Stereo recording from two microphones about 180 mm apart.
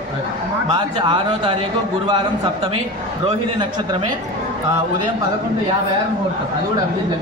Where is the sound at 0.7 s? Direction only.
25° right (ahead or behind).